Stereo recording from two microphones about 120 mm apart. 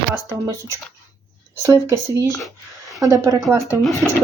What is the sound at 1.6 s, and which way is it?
Speech, 25° right (ahead or behind).